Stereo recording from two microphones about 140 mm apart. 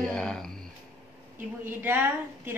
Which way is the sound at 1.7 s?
15° right (ahead or behind).